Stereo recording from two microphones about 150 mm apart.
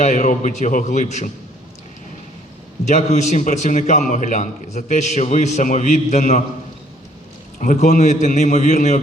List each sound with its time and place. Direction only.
0.0 s a man's voice: 55° left (ahead or behind)
2.8 s a man's voice: 50° left (ahead or behind)
7.6 s a man's voice: 55° left (ahead or behind)